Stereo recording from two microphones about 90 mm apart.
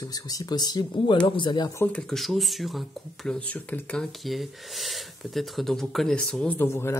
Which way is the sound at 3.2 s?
15° left (ahead or behind).